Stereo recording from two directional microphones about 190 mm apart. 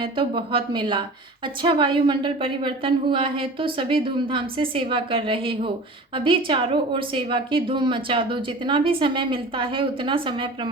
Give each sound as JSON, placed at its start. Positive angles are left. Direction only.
{"t": 0.0, "sound": "a woman's voice", "side_deg": -25}